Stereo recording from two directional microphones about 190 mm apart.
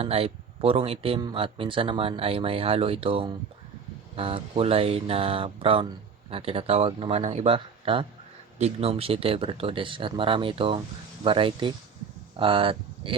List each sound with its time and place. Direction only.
0.0 s speech: 30° right (ahead or behind)